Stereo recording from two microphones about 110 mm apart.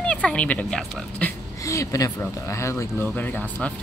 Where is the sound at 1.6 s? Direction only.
30° left (ahead or behind).